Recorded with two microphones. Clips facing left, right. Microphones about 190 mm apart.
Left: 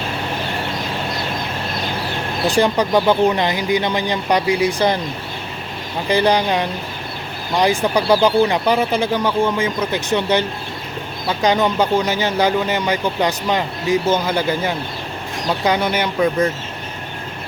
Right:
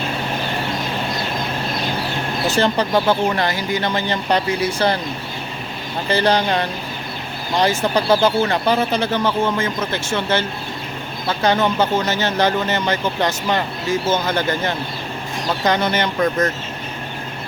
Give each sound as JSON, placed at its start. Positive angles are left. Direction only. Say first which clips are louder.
{"t": 2.5, "sound": "speech", "louder": "left 2 dB", "side_deg": 15}
{"t": 6.1, "sound": "speech", "louder": "left 1 dB", "side_deg": 15}